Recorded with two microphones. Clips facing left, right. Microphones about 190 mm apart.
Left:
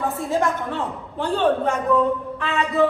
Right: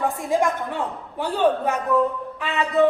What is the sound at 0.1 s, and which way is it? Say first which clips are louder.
A man's voice: even; 15° right (ahead or behind).